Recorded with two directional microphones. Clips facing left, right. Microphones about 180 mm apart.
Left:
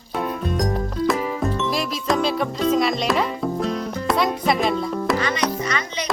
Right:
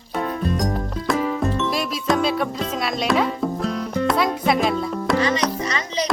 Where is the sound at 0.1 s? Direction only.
Centre (ahead or behind).